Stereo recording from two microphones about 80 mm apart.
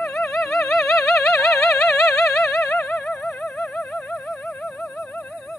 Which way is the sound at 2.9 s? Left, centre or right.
Centre.